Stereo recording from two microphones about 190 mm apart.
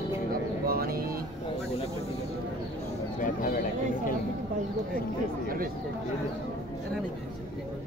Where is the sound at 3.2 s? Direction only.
45° left (ahead or behind).